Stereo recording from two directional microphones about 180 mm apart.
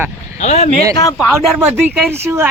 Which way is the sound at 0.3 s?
40° left (ahead or behind).